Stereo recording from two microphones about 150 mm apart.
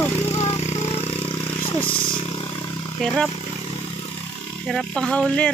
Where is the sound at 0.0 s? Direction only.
15° left (ahead or behind).